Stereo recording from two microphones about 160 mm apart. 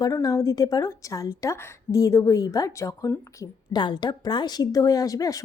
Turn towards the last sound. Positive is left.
turn(degrees=20)  # may be behind; listen again after turning